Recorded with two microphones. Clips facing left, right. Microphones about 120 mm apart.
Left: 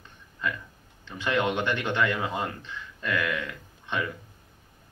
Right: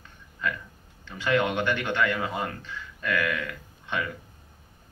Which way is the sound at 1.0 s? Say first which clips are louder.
Right 2 dB; 20° left (ahead or behind).